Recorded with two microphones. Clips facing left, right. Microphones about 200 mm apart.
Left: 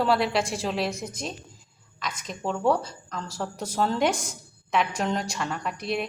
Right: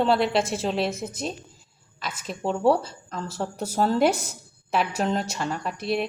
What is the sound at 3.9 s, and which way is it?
Speech, 5° right (ahead or behind).